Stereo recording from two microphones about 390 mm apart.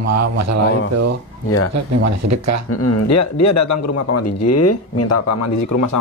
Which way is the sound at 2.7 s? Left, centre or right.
Left.